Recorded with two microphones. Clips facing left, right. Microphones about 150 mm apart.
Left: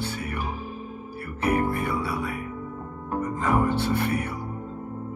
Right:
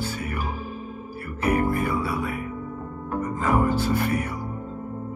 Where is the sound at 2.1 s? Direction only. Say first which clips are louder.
Right 2 dB; 40° right (ahead or behind).